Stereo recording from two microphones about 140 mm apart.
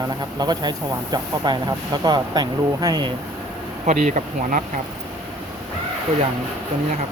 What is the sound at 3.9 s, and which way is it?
Bee, 60° right (ahead or behind).